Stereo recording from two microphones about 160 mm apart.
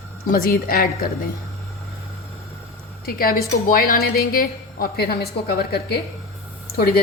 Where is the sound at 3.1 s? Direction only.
65° left (ahead or behind).